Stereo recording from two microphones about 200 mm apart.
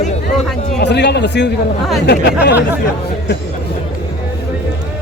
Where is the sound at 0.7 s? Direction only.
55° left (ahead or behind).